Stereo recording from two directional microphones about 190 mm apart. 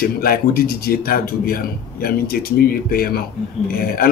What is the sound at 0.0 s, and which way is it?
Speech, 50° left (ahead or behind).